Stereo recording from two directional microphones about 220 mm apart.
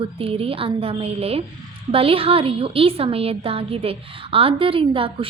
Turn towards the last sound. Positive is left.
turn(degrees=-25)  # may be behind; listen again after turning